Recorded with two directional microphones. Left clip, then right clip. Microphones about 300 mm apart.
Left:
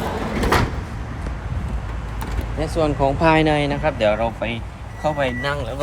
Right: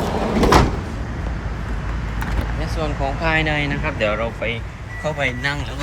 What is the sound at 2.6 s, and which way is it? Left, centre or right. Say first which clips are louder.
Speech: left 6 dB; left.